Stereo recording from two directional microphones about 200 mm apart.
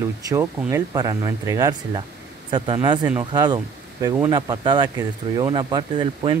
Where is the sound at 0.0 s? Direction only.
15° right (ahead or behind).